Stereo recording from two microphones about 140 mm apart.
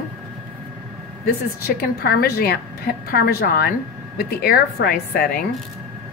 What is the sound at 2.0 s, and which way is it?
A woman's voice, 90° left.